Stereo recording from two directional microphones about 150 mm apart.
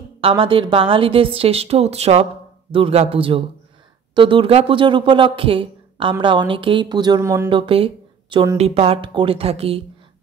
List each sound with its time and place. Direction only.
0.2 s a woman's voice: 35° right (ahead or behind); by 7.4 s 20° right (ahead or behind)
7.4 s a woman's voice: 35° right (ahead or behind)